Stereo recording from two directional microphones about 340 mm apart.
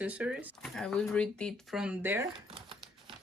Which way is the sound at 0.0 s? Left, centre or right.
Centre.